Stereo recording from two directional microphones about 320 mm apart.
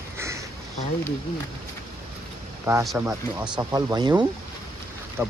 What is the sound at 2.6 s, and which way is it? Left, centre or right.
Speech, centre.